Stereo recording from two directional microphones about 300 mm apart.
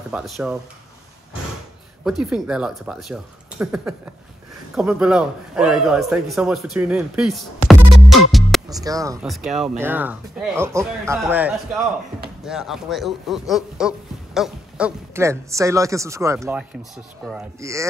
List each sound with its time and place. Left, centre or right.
0.1 s a man's voice: centre
2.0 s a man's voice: centre
8.8 s a man's voice: centre